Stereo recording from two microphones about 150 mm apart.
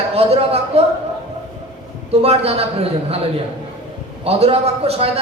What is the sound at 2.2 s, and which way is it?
Speech, 40° right (ahead or behind).